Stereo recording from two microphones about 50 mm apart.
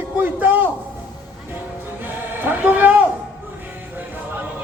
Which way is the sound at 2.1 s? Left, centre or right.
Right.